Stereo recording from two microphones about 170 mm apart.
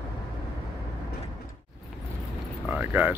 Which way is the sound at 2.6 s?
10° right (ahead or behind).